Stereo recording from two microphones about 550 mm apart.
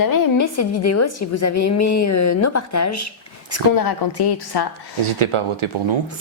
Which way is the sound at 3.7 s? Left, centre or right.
Left.